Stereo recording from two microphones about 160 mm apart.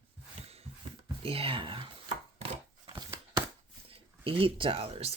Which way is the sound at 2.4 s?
40° right (ahead or behind).